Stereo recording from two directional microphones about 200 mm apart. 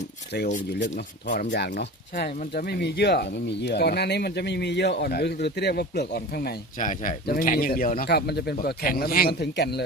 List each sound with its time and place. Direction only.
0.7 s speech: 55° left (ahead or behind)